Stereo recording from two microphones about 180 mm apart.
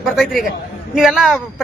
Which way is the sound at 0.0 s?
Centre (ahead or behind).